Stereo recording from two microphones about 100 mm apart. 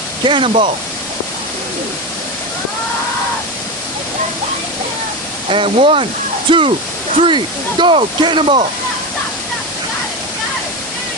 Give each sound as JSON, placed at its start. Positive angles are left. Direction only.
{"t": 0.3, "sound": "speech", "side_deg": -65}
{"t": 5.5, "sound": "speech", "side_deg": -65}